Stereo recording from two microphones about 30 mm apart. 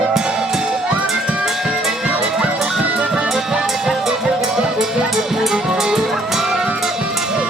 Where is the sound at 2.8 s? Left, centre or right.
Right.